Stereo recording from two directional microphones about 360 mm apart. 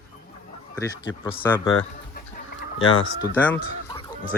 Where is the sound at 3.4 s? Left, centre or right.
Centre.